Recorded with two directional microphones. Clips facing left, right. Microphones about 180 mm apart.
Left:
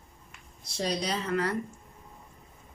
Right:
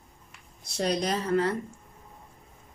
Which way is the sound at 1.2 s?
25° right (ahead or behind).